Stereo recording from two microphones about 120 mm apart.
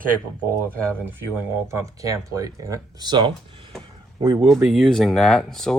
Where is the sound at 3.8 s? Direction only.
45° right (ahead or behind).